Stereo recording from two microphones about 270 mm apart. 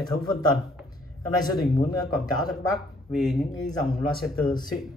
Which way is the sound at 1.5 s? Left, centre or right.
Centre.